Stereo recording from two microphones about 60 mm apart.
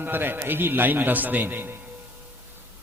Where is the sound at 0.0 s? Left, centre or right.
Right.